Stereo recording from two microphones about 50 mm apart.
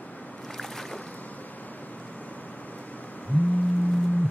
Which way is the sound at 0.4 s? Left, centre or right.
Centre.